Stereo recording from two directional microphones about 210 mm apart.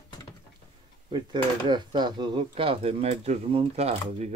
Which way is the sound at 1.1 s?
20° right (ahead or behind).